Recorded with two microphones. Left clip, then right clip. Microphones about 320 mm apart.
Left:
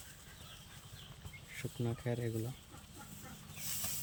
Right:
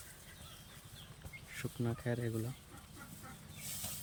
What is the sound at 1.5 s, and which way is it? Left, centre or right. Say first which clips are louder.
Speech: right 1 dB; centre.